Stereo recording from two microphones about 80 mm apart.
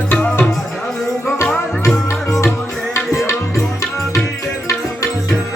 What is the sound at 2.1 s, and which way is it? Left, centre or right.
Music, left.